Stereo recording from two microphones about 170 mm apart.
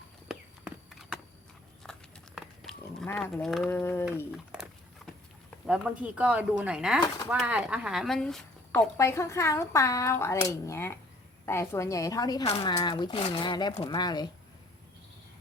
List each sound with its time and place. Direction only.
0.3 s walk: centre (ahead or behind)
1.8 s livestock: centre (ahead or behind)
3.4 s speech: centre (ahead or behind)
3.7 s speech: 15° left (ahead or behind)
4.3 s dog: 5° right (ahead or behind)
5.6 s speech: 5° right (ahead or behind)
8.7 s speech: 15° left (ahead or behind)